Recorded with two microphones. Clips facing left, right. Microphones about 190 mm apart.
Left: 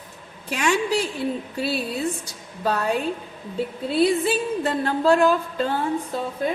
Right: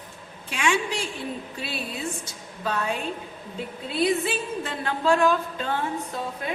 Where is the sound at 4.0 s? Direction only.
40° left (ahead or behind).